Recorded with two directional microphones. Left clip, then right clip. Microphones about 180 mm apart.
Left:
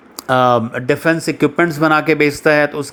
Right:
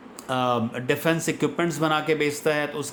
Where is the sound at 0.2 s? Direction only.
40° left (ahead or behind).